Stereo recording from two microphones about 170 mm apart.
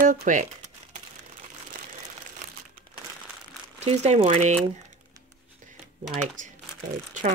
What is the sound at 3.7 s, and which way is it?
Speech, 40° right (ahead or behind).